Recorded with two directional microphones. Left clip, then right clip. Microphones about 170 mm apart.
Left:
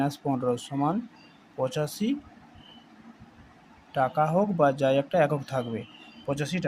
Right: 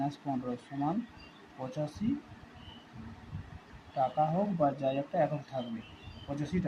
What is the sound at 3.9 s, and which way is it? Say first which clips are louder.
Speech: left 6 dB; 45° left (ahead or behind).